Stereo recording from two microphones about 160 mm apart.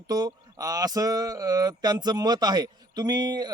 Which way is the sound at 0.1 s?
25° right (ahead or behind).